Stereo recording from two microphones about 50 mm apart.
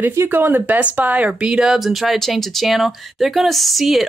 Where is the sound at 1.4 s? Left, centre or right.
Centre.